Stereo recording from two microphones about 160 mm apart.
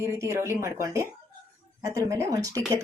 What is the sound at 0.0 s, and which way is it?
Speech, 20° right (ahead or behind).